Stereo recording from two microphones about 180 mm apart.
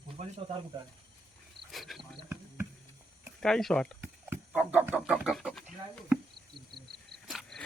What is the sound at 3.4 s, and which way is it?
Speech, 5° left (ahead or behind).